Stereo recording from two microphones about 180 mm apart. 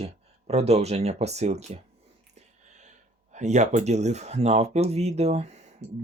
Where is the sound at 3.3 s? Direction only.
40° right (ahead or behind).